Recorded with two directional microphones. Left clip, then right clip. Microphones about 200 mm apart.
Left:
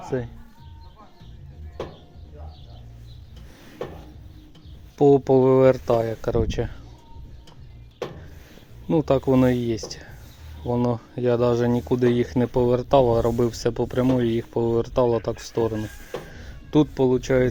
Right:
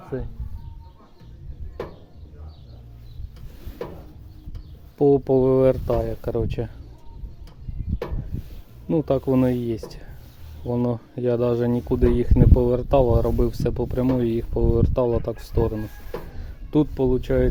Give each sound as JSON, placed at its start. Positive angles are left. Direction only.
{"t": 0.1, "sound": "speech", "side_deg": 10}
{"t": 4.9, "sound": "speech", "side_deg": -10}
{"t": 8.9, "sound": "speech", "side_deg": -10}